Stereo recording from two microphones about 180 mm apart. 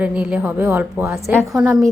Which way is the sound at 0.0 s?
5° right (ahead or behind).